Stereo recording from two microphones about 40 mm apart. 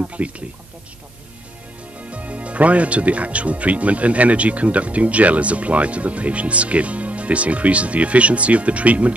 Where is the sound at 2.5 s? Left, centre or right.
Right.